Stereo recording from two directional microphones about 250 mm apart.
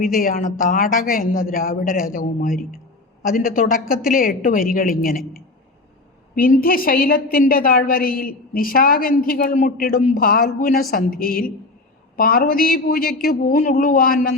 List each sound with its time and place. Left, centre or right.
0.0 s a woman's voice: left
6.3 s a woman's voice: left